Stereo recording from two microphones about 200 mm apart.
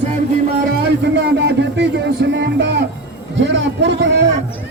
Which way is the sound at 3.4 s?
65° right (ahead or behind).